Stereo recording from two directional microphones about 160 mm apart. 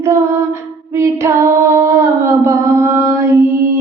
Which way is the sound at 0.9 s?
15° right (ahead or behind).